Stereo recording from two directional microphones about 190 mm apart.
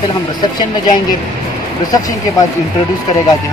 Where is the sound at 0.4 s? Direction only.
25° left (ahead or behind).